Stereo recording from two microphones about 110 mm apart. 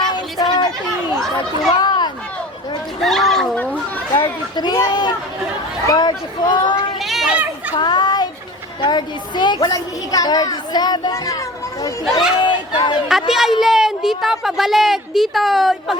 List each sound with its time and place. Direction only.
0.0 s a sound: 40° left (ahead or behind)
1.8 s chatter: 40° left (ahead or behind)
3.0 s speech: centre (ahead or behind)
4.1 s a woman's voice: 40° left (ahead or behind)
7.0 s children playing: centre (ahead or behind)
7.8 s a child's voice: 40° left (ahead or behind)
12.4 s speech: 45° left (ahead or behind)
13.1 s speech: centre (ahead or behind)